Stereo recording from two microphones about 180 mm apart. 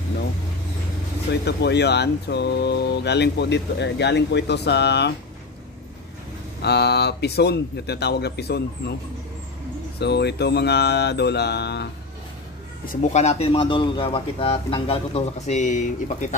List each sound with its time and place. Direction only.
1.3 s speech: 70° left (ahead or behind)
6.6 s a man's voice: 65° left (ahead or behind)
9.9 s speech: 65° left (ahead or behind)
12.8 s speech: 40° left (ahead or behind)